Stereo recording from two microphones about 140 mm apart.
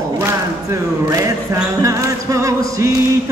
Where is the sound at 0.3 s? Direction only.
20° right (ahead or behind).